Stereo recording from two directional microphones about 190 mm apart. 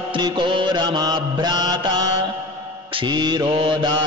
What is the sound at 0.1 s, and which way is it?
Mantra, 25° right (ahead or behind).